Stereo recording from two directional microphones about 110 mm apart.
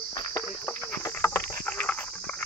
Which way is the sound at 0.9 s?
25° left (ahead or behind).